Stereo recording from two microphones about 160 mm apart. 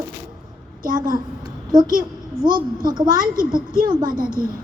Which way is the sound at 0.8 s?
60° right (ahead or behind).